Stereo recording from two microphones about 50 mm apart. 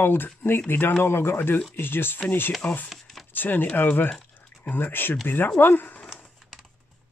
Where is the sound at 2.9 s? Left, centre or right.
Centre.